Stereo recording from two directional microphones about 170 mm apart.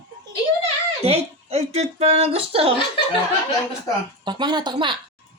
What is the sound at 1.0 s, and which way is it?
Speech, 35° right (ahead or behind).